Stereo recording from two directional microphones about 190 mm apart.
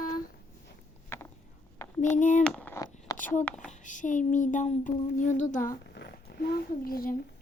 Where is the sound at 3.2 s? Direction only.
45° left (ahead or behind).